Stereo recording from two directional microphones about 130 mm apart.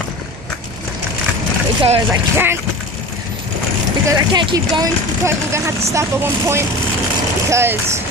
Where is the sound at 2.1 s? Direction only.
20° right (ahead or behind).